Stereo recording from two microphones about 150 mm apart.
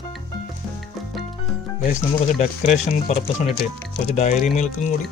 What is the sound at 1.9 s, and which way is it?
Speech, 50° left (ahead or behind).